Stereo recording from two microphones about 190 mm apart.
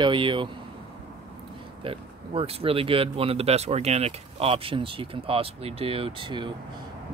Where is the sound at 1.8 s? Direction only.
30° right (ahead or behind).